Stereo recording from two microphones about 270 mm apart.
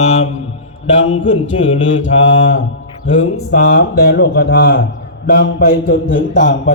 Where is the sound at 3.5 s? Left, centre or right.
Left.